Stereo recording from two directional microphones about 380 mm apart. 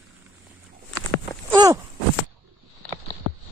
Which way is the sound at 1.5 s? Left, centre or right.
Centre.